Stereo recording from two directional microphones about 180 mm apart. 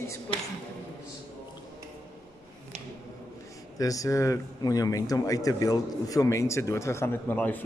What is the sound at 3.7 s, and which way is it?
Speech, 20° left (ahead or behind).